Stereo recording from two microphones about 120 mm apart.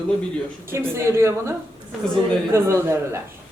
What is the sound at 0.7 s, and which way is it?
A woman's voice, 20° right (ahead or behind).